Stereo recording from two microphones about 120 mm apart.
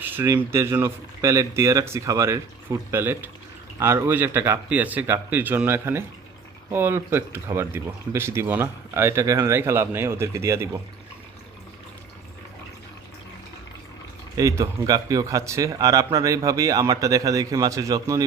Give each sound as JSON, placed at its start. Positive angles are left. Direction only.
{"t": 0.0, "sound": "a sound", "side_deg": -15}
{"t": 0.3, "sound": "speech", "side_deg": -20}
{"t": 14.3, "sound": "speech", "side_deg": -30}